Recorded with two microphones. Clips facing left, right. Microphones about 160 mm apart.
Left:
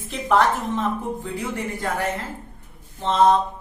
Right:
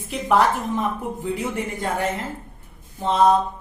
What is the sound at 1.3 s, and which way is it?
Speech, 20° right (ahead or behind).